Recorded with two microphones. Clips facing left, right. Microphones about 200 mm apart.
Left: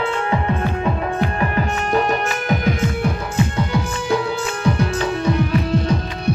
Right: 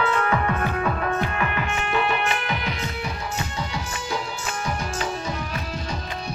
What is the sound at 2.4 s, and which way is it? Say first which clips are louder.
Music: left 9 dB; 50° left (ahead or behind).